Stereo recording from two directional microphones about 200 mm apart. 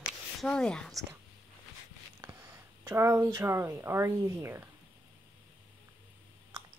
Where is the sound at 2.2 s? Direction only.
10° right (ahead or behind).